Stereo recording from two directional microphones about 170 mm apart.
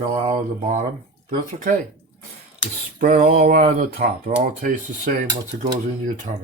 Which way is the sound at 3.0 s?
50° right (ahead or behind).